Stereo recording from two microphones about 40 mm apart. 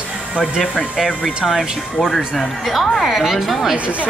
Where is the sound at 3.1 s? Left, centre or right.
Centre.